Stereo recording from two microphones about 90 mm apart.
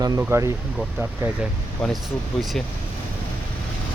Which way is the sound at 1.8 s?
5° left (ahead or behind).